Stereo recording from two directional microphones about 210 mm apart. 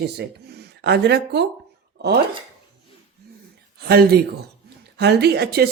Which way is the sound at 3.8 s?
50° right (ahead or behind).